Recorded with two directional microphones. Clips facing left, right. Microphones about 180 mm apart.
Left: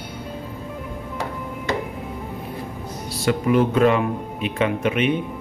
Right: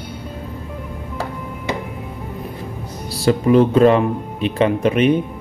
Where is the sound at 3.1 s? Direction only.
35° right (ahead or behind).